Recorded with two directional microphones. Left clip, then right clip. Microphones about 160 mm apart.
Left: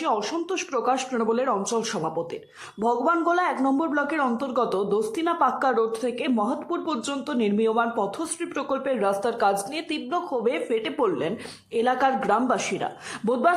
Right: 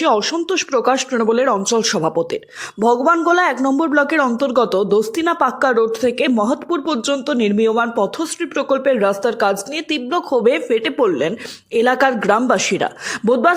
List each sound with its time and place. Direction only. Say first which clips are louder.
0.0 s speech: right 9 dB; 30° right (ahead or behind)